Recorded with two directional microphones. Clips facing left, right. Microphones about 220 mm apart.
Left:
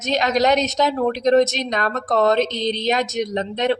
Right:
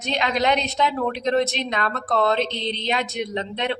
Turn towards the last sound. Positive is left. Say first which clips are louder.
# left 5 dB
turn(degrees=45)  # may be behind; listen again after turning